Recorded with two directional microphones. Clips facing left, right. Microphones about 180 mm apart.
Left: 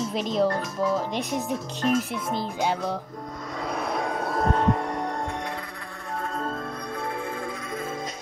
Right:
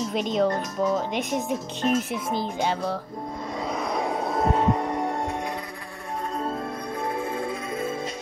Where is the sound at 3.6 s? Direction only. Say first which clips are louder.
Even; centre (ahead or behind).